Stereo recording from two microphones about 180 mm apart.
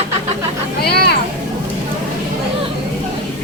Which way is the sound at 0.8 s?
65° left (ahead or behind).